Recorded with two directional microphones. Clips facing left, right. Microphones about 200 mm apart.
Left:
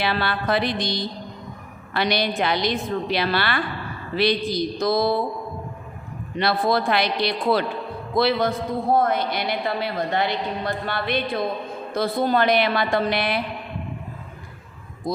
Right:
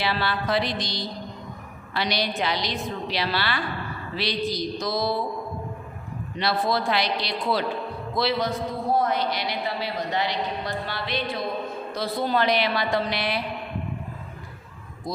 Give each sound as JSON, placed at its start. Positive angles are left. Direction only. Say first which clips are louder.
{"t": 0.0, "sound": "a woman's voice", "louder": "left 2 dB", "side_deg": 55}
{"t": 6.3, "sound": "a woman's voice", "louder": "left 4 dB", "side_deg": 55}
{"t": 15.1, "sound": "a woman's voice", "louder": "left 5 dB", "side_deg": 55}